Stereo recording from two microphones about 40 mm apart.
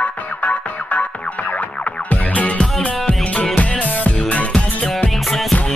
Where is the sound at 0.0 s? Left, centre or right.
Left.